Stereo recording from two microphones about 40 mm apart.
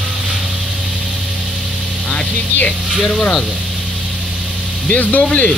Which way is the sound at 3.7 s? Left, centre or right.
Right.